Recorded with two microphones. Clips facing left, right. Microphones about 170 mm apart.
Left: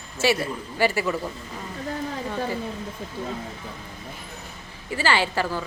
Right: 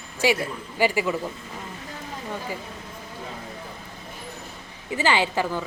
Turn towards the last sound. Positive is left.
turn(degrees=-15)  # may be behind; listen again after turning